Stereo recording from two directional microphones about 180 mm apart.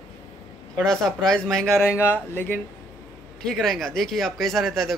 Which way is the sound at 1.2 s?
5° left (ahead or behind).